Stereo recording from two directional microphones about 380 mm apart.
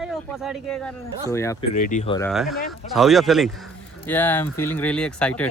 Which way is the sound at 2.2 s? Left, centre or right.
Centre.